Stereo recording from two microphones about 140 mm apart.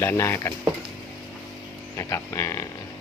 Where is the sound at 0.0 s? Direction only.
20° left (ahead or behind).